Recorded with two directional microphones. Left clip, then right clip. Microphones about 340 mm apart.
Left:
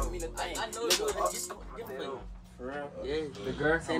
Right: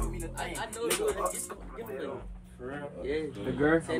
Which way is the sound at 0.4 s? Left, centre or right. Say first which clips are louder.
Left 1 dB; left.